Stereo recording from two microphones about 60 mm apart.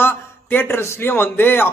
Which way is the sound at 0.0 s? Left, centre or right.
Left.